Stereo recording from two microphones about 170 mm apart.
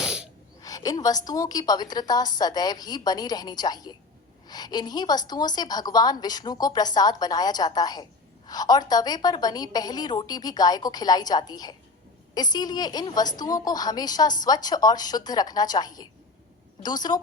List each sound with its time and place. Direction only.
0.0 s sneeze: 5° right (ahead or behind)
0.6 s a woman's voice: 20° left (ahead or behind)